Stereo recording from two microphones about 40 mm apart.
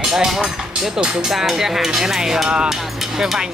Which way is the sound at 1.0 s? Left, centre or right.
Right.